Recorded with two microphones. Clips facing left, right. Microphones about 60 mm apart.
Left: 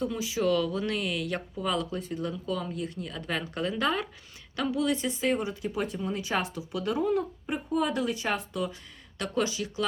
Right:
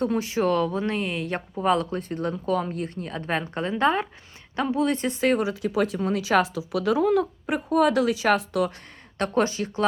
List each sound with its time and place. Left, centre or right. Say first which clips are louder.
0.0 s speech: right 5 dB; right
1.5 s speech: right 9 dB; right
9.1 s speech: right 6 dB; right